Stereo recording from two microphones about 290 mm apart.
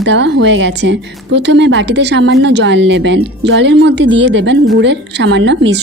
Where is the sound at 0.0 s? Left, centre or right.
Right.